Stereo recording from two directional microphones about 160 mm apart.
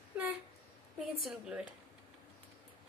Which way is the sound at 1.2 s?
5° right (ahead or behind).